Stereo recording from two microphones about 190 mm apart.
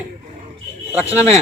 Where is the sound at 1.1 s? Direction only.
35° right (ahead or behind).